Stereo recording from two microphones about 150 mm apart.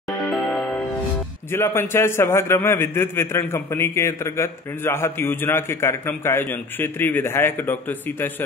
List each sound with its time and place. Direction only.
0.3 s music: 5° left (ahead or behind)
1.5 s a man's voice: 15° left (ahead or behind)